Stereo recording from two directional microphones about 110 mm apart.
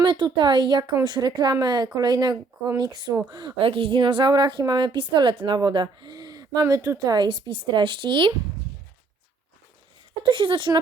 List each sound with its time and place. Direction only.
0.0 s a woman's voice: 45° right (ahead or behind)
3.6 s a woman's voice: 55° right (ahead or behind)
10.2 s a woman's voice: 50° right (ahead or behind)